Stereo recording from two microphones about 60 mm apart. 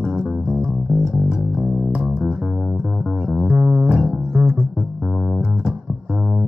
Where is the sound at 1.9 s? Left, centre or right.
Right.